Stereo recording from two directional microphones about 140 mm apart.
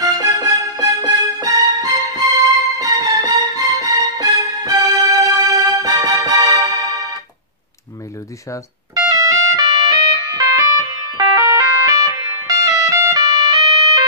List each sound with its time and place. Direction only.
0.0 s music: 25° right (ahead or behind)
9.1 s music: 25° right (ahead or behind)